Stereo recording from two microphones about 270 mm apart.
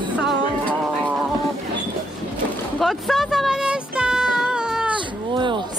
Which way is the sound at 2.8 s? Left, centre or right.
Centre.